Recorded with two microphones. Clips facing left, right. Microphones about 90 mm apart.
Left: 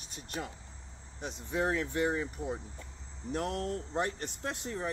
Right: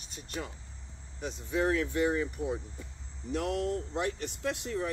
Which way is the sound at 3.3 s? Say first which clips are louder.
Right 3 dB; 40° left (ahead or behind).